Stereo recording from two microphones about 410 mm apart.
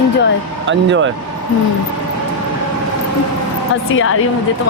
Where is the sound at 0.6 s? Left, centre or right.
Right.